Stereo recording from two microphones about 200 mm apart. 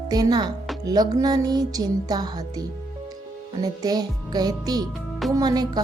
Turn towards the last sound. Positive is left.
turn(degrees=-20)  # may be behind; listen again after turning